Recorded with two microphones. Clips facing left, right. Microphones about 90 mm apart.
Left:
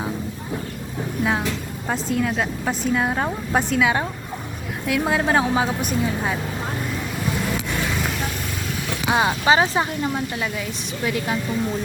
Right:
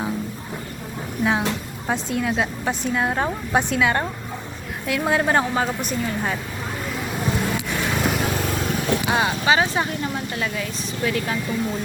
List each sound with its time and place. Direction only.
1.2 s a woman's voice: centre (ahead or behind)
9.0 s speech: 25° left (ahead or behind)